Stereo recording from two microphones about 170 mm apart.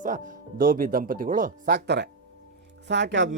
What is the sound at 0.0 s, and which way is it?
A man's voice, 55° right (ahead or behind).